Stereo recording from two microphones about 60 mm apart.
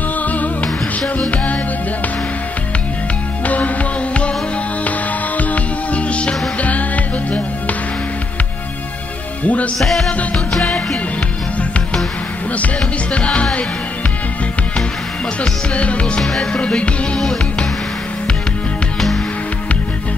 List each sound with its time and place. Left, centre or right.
0.2 s music: left
3.4 s music: left
5.4 s music: left
9.4 s music: left
9.8 s music: centre
12.5 s music: left
15.7 s music: left
18.9 s music: centre